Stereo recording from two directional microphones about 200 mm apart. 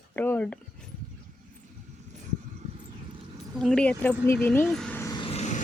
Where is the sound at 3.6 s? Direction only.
5° left (ahead or behind).